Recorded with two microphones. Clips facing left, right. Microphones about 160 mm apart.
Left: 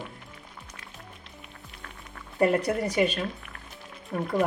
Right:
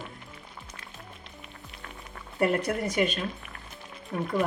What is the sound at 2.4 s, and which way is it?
Speech, 35° left (ahead or behind).